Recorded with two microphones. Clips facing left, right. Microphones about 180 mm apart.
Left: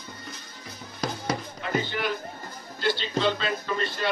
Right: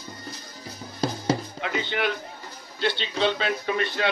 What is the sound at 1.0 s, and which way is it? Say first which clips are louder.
Music: right 4 dB; 30° right (ahead or behind).